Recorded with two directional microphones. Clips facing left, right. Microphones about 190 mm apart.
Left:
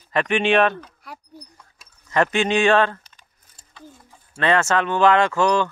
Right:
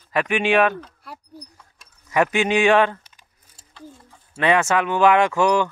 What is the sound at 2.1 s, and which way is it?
Speech, 10° right (ahead or behind).